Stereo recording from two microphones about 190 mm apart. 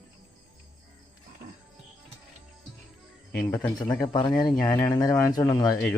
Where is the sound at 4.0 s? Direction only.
25° left (ahead or behind).